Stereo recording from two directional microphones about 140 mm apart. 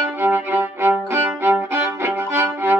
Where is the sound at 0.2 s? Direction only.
15° right (ahead or behind).